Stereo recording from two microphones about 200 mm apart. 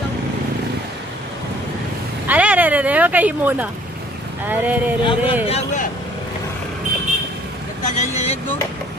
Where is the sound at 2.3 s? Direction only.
5° right (ahead or behind).